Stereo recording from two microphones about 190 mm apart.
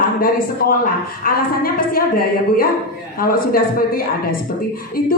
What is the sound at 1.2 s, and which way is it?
A woman's voice, 50° left (ahead or behind).